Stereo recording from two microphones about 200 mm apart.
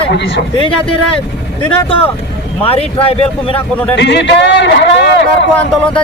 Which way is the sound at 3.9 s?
60° left (ahead or behind).